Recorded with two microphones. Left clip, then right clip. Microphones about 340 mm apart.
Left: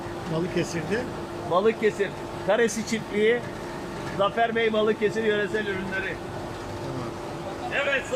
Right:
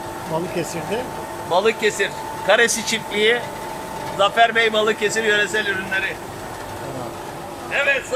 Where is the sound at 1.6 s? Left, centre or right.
Right.